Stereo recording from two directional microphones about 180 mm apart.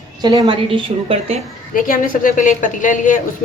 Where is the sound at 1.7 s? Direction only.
50° left (ahead or behind).